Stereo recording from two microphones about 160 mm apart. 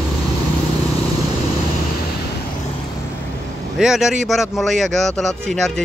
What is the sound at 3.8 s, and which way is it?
Speech, centre (ahead or behind).